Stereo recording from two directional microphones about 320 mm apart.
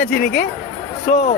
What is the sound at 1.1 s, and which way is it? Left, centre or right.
Speech, left.